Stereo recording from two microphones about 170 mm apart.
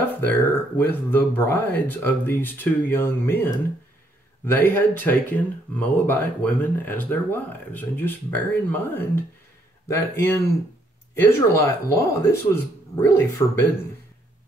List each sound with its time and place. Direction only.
0.2 s speech: 10° left (ahead or behind)